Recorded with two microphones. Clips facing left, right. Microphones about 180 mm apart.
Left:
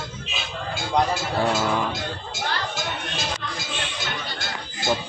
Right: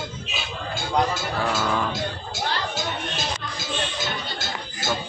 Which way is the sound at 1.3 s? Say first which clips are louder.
Left 2 dB; 20° left (ahead or behind).